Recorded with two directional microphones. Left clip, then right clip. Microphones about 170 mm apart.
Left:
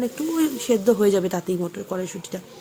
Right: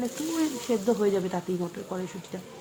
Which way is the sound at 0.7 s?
20° left (ahead or behind).